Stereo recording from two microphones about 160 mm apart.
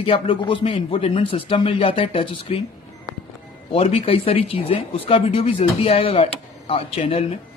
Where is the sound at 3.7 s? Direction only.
35° left (ahead or behind).